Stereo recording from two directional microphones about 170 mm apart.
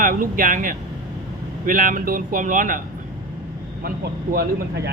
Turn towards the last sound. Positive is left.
turn(degrees=-60)  # may be behind; listen again after turning